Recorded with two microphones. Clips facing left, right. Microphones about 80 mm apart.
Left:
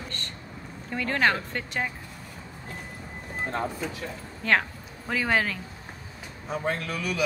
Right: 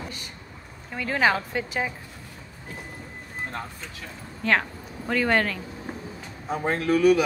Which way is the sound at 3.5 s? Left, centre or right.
Centre.